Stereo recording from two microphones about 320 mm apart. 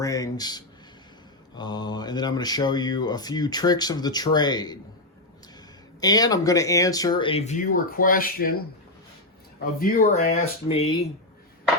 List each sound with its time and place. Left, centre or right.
0.0 s speech: centre
6.0 s speech: centre; by 8.5 s left
9.8 s speech: left